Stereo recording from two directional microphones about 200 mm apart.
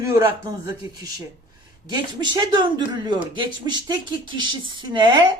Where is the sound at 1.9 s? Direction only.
20° right (ahead or behind).